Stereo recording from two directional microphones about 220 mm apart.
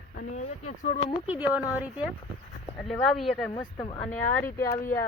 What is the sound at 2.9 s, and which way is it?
Speech, centre (ahead or behind).